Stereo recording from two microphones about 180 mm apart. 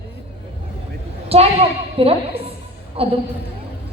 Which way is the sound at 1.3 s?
35° right (ahead or behind).